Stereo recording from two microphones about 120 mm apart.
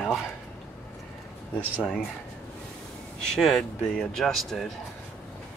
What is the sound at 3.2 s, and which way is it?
Speech, 5° left (ahead or behind).